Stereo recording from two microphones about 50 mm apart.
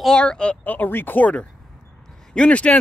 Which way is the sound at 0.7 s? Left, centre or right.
Left.